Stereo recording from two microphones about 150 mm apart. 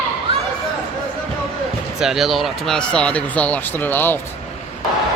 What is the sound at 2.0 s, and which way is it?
Speech, centre (ahead or behind).